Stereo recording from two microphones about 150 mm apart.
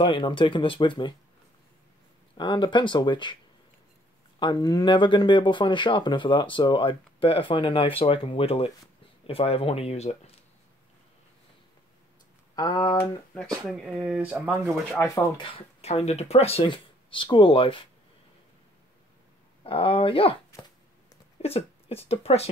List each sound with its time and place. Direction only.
0.0 s speech: 35° left (ahead or behind)
2.3 s speech: 30° left (ahead or behind)
4.4 s speech: 30° left (ahead or behind); by 10.3 s 45° left (ahead or behind)
12.5 s speech: 30° left (ahead or behind)
13.7 s speech: 5° right (ahead or behind)
14.9 s speech: 20° left (ahead or behind)
15.3 s speech: 35° left (ahead or behind)
19.6 s speech: 35° left (ahead or behind)
21.4 s speech: 45° left (ahead or behind)